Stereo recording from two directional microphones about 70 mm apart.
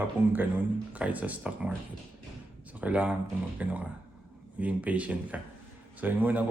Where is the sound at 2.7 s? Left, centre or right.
Right.